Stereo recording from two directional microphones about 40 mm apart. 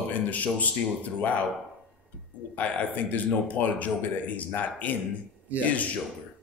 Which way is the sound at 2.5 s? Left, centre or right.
Left.